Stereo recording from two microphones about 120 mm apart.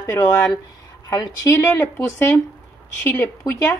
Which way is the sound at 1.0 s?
35° left (ahead or behind).